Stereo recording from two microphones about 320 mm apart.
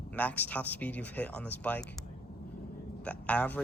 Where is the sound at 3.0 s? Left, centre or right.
Centre.